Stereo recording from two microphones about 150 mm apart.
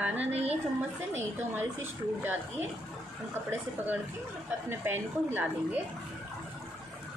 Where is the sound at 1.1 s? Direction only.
15° right (ahead or behind).